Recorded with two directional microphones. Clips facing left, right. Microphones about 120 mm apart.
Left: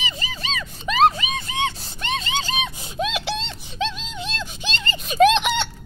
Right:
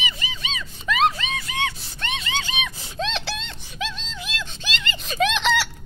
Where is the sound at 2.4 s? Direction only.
35° left (ahead or behind).